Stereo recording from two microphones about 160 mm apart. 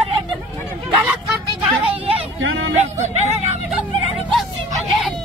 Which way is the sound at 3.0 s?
45° right (ahead or behind).